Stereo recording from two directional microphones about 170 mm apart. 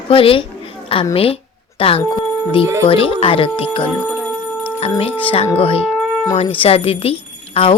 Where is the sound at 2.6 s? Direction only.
15° right (ahead or behind).